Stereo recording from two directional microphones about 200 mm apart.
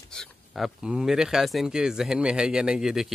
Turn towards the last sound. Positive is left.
turn(degrees=0)  # may be behind; listen again after turning